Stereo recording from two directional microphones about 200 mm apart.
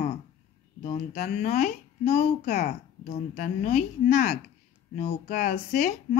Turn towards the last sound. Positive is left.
turn(degrees=35)  # may be behind; listen again after turning